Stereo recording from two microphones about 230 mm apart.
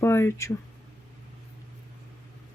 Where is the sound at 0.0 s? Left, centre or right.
Centre.